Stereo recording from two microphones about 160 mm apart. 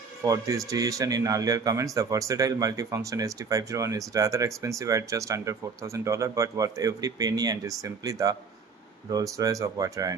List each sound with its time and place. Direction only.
0.2 s a man's voice: 20° right (ahead or behind)